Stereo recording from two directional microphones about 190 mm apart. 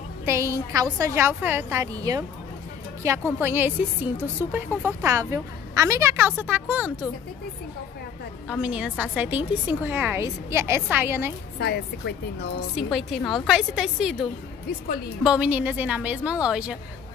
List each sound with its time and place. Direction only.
0.2 s a woman's voice: 15° right (ahead or behind)
3.3 s a woman's voice: 10° right (ahead or behind)
8.5 s a woman's voice: 5° right (ahead or behind)
11.5 s a woman's voice: 60° left (ahead or behind)
12.7 s a woman's voice: centre (ahead or behind)
15.2 s a woman's voice: 5° right (ahead or behind)